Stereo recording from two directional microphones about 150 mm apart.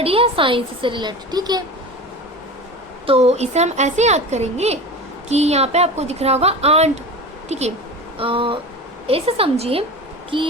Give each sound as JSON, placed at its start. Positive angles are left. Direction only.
{"t": 0.0, "sound": "a woman's voice", "side_deg": -40}
{"t": 3.1, "sound": "a woman's voice", "side_deg": -45}
{"t": 8.2, "sound": "a woman's voice", "side_deg": -35}